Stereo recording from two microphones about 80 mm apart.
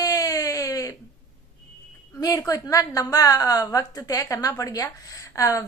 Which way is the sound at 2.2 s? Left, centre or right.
Left.